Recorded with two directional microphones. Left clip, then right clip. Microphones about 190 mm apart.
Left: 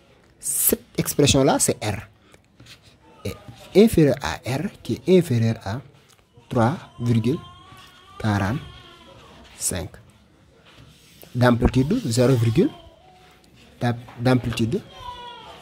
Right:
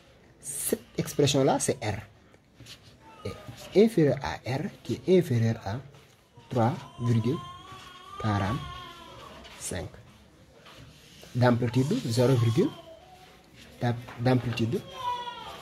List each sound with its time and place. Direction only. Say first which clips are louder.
0.7 s speech: left 5 dB; 25° left (ahead or behind)
3.2 s speech: left 5 dB; 25° left (ahead or behind)
11.3 s speech: left 6 dB; 25° left (ahead or behind)
13.7 s speech: left 5 dB; 20° left (ahead or behind)